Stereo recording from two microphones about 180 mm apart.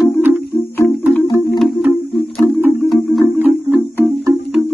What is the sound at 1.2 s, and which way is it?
Music, 20° left (ahead or behind).